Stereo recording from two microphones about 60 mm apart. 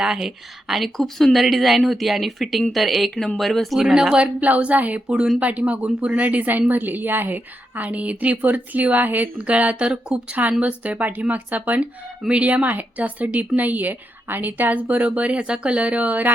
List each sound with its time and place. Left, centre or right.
0.0 s a woman's voice: centre
3.8 s speech: centre
4.4 s speech: right